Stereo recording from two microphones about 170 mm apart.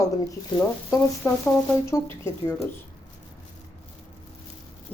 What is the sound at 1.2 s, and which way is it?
A woman's voice, 15° left (ahead or behind).